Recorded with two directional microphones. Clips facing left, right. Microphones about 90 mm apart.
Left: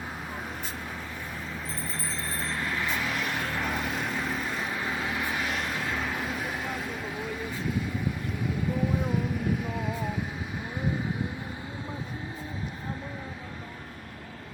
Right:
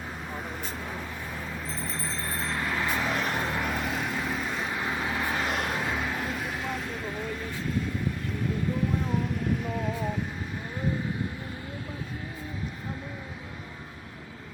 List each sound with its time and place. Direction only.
2.6 s vehicle: 20° right (ahead or behind)
3.1 s vehicle: 35° right (ahead or behind)
3.6 s vehicle: centre (ahead or behind)
4.9 s vehicle: 20° right (ahead or behind)
5.4 s vehicle: 45° right (ahead or behind)
6.0 s vehicle: centre (ahead or behind)
9.0 s vehicle: 5° left (ahead or behind)